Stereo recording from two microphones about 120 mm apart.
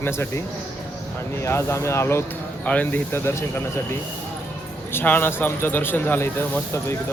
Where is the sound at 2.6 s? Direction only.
10° left (ahead or behind).